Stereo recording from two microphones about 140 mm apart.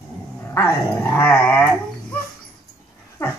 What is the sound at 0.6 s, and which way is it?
Dog, 15° left (ahead or behind).